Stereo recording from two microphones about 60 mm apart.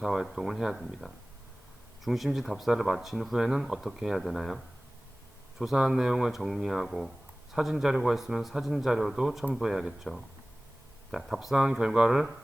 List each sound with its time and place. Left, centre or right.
0.0 s speech: centre